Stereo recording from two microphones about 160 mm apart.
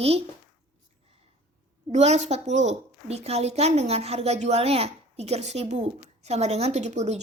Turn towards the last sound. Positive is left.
turn(degrees=-45)  # may be behind; listen again after turning